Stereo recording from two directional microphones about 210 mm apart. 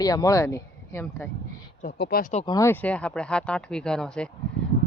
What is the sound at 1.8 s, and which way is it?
Speech, 45° left (ahead or behind).